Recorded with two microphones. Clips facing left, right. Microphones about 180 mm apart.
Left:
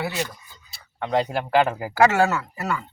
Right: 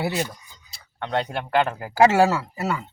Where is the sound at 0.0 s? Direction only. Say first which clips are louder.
Right 2 dB; 35° right (ahead or behind).